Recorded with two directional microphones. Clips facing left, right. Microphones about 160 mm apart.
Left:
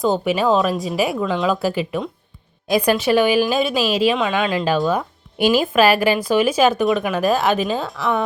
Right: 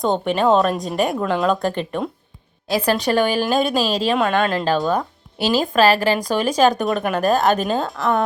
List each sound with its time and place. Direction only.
0.0 s speech: 5° left (ahead or behind)
2.6 s a woman's voice: 15° left (ahead or behind)
3.8 s a woman's voice: 40° right (ahead or behind)
4.8 s speech: 5° left (ahead or behind)